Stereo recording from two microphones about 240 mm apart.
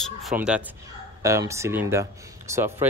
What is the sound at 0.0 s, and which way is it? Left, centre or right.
Speech, centre.